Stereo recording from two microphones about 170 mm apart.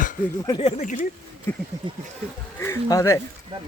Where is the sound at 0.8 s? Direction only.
50° left (ahead or behind).